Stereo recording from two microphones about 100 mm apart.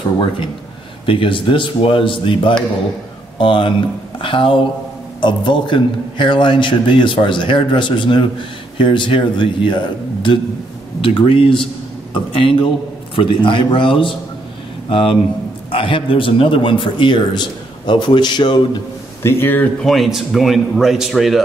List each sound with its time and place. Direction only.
1.0 s a man's voice: 60° left (ahead or behind)
19.2 s speech: 20° left (ahead or behind)
19.8 s a man's voice: centre (ahead or behind)